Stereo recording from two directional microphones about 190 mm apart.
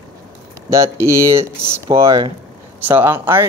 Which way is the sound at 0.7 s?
15° right (ahead or behind).